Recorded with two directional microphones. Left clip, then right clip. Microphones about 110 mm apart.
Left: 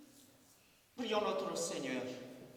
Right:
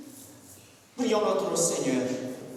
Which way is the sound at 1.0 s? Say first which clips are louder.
Right 11 dB; 35° left (ahead or behind).